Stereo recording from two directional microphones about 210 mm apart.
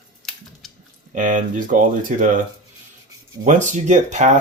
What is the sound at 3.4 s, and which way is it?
Speech, 35° right (ahead or behind).